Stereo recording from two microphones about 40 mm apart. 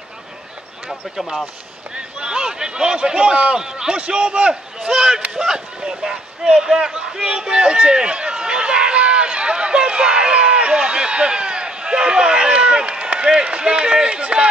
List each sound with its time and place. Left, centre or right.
0.8 s speech: centre
2.0 s a man's voice: centre
4.8 s a man's voice: centre